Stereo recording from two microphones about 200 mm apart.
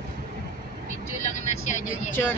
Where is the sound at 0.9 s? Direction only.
35° left (ahead or behind).